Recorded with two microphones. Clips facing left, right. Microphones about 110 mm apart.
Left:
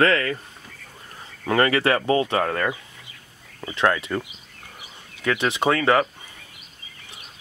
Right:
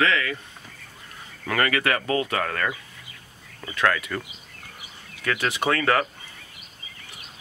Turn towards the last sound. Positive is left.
turn(degrees=20)  # may be behind; listen again after turning